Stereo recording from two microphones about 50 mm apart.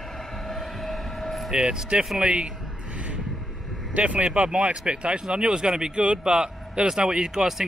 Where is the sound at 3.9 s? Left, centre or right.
Right; by 7.6 s centre.